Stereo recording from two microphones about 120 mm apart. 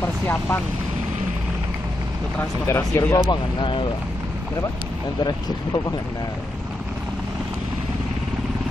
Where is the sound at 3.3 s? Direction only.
45° left (ahead or behind).